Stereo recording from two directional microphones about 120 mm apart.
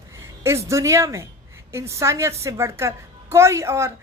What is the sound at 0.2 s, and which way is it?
Speech, 25° right (ahead or behind).